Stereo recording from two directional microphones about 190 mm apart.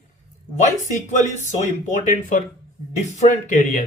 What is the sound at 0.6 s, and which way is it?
A man's voice, 40° left (ahead or behind).